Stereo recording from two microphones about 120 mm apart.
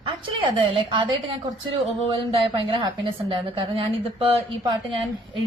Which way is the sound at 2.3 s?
50° right (ahead or behind).